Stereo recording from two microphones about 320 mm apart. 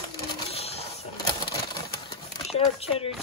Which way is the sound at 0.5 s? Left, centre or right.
Centre.